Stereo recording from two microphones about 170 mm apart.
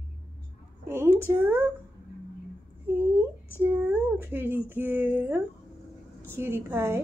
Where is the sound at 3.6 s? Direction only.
10° right (ahead or behind).